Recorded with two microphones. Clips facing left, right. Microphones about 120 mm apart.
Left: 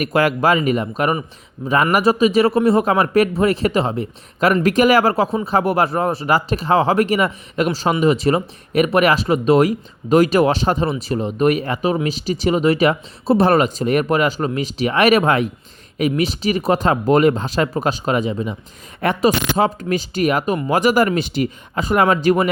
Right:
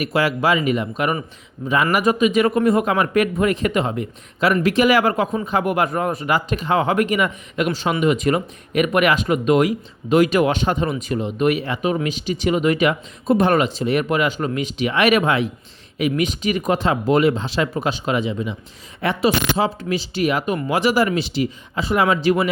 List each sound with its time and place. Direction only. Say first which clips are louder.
0.0 s speech: left 3 dB; 50° left (ahead or behind); by 4.0 s 30° left (ahead or behind)
4.6 s speech: left 2 dB; 45° left (ahead or behind)